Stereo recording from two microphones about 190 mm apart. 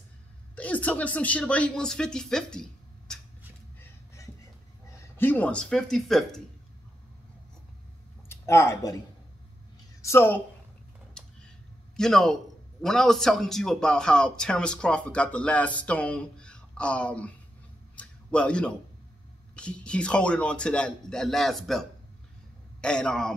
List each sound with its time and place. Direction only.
0.6 s speech: 10° left (ahead or behind)
3.8 s a sound: 15° left (ahead or behind)
4.9 s speech: 10° left (ahead or behind)
8.3 s speech: 15° left (ahead or behind)
10.0 s a woman's voice: 10° left (ahead or behind)
11.2 s a sound: 5° left (ahead or behind)
12.0 s a man's voice: centre (ahead or behind)
17.9 s a sound: 5° left (ahead or behind)
19.5 s a man's voice: 5° left (ahead or behind)